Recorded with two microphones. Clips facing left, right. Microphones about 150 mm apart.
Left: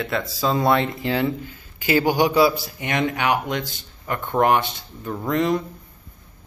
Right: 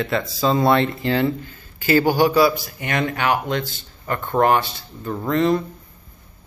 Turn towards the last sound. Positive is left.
turn(degrees=15)  # may be behind; listen again after turning